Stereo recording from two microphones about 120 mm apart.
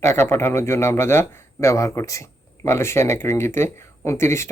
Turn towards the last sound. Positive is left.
turn(degrees=20)  # may be behind; listen again after turning